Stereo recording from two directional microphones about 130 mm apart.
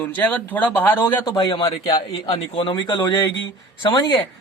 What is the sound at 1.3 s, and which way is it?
Speech, 35° left (ahead or behind).